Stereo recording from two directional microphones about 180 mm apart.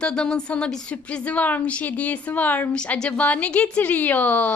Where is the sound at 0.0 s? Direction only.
5° left (ahead or behind).